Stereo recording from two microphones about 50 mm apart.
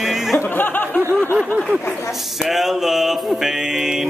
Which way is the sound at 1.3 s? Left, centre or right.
Right.